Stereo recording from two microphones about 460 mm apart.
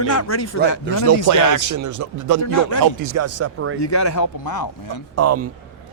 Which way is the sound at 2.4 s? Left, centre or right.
Left.